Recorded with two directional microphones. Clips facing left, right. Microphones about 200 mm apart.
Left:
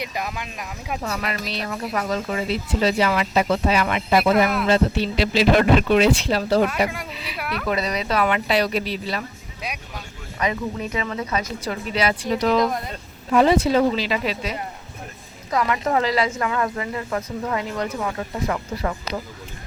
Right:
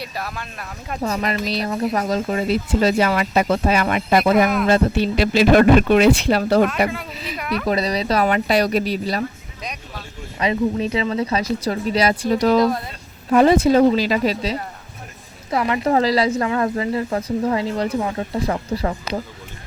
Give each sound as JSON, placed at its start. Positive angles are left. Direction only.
{"t": 0.0, "sound": "speech", "side_deg": 15}
{"t": 1.1, "sound": "speech", "side_deg": -35}
{"t": 6.7, "sound": "speech", "side_deg": 10}
{"t": 7.1, "sound": "speech", "side_deg": -40}
{"t": 7.3, "sound": "speech", "side_deg": 5}
{"t": 7.7, "sound": "speech", "side_deg": -35}
{"t": 9.6, "sound": "speech", "side_deg": 5}
{"t": 10.3, "sound": "speech", "side_deg": -25}
{"t": 15.4, "sound": "speech", "side_deg": -25}